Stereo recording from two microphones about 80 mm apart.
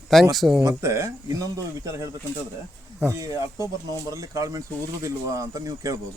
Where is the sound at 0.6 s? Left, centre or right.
Right.